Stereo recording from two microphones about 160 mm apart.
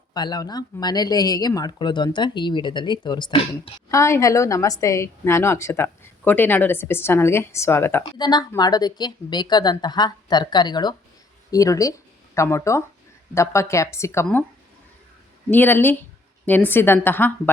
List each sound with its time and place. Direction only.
0.1 s speech: 25° left (ahead or behind)
8.2 s a woman's voice: 25° left (ahead or behind)
15.4 s a woman's voice: 10° left (ahead or behind)